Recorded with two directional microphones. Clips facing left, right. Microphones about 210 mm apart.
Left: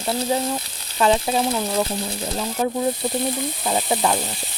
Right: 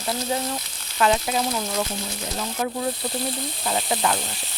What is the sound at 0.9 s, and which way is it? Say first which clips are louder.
Speech: left 3 dB; 30° left (ahead or behind).